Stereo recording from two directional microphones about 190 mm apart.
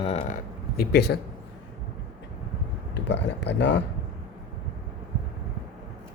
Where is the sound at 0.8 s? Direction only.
60° left (ahead or behind).